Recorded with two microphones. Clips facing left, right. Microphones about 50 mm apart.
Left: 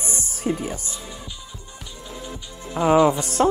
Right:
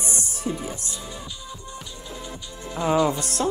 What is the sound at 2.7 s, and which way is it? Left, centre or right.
Speech, left.